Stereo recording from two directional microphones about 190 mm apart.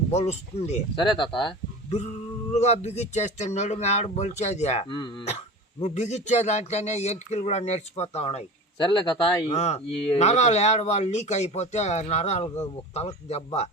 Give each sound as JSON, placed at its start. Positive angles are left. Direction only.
{"t": 0.1, "sound": "speech", "side_deg": 35}
{"t": 1.0, "sound": "speech", "side_deg": 25}
{"t": 5.8, "sound": "speech", "side_deg": 35}
{"t": 9.5, "sound": "speech", "side_deg": 35}